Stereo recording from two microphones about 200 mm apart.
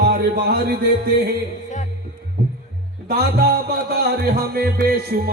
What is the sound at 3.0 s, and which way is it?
Music, 50° right (ahead or behind).